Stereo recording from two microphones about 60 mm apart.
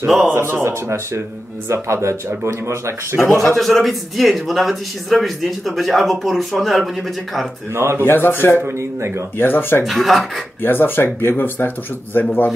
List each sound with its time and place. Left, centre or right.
0.0 s a man's voice: centre
0.3 s speech: right
3.5 s a man's voice: centre
7.7 s speech: right
8.0 s speech: left
9.8 s a man's voice: centre
10.6 s speech: left